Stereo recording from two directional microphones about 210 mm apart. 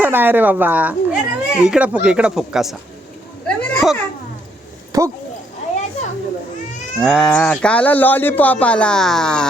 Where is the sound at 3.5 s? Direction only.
Centre (ahead or behind).